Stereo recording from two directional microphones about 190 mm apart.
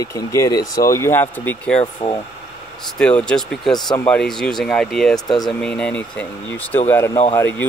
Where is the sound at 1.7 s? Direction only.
25° left (ahead or behind).